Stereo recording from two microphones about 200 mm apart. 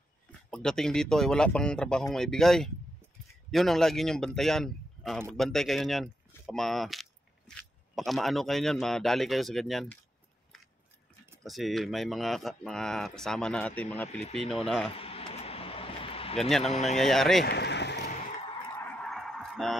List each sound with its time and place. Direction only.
0.5 s speech: 5° left (ahead or behind)
11.4 s speech: centre (ahead or behind)
15.0 s a sound: 30° left (ahead or behind)
16.3 s speech: centre (ahead or behind)
16.7 s speech: 35° left (ahead or behind)
17.0 s speech: centre (ahead or behind)
17.5 s a sound: 60° left (ahead or behind)
18.8 s honk: 5° left (ahead or behind)